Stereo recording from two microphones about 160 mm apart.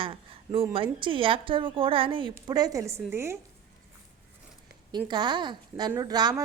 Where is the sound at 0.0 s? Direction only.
35° right (ahead or behind); by 3.3 s 15° right (ahead or behind).